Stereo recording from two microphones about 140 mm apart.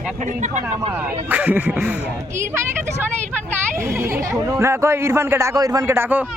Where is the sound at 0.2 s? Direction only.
60° right (ahead or behind).